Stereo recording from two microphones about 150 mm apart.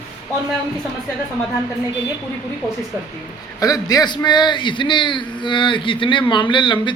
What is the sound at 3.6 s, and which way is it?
A man's voice, 25° left (ahead or behind).